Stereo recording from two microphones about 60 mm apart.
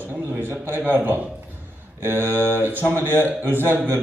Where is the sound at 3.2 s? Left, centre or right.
Right.